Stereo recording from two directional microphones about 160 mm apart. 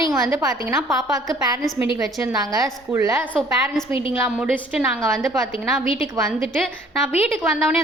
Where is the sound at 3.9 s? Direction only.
35° left (ahead or behind).